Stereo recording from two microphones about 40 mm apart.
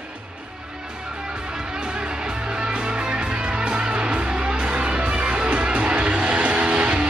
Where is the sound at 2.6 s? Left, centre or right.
Right.